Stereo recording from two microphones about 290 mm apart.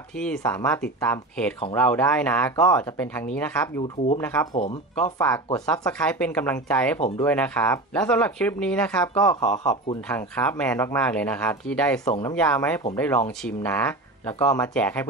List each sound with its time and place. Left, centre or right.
0.2 s speech: centre
7.0 s speech: centre
7.2 s speech: centre